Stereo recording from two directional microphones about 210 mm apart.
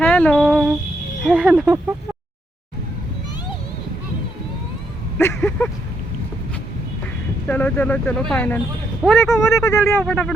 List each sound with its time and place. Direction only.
0.0 s a sound: 5° left (ahead or behind)
1.2 s speech: 5° right (ahead or behind)
5.1 s speech: 10° left (ahead or behind)
7.4 s speech: 5° left (ahead or behind)
9.6 s speech: 15° left (ahead or behind)